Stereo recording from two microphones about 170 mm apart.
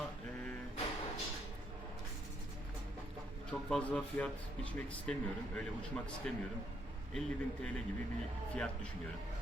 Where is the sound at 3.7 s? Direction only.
5° left (ahead or behind).